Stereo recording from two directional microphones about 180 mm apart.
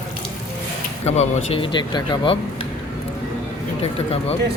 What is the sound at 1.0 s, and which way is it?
Speech, 35° left (ahead or behind).